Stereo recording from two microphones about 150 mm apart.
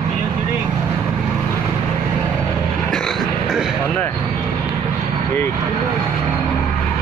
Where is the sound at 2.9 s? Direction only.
Centre (ahead or behind).